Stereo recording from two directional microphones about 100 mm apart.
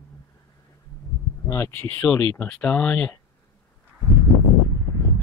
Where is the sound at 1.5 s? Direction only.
25° left (ahead or behind).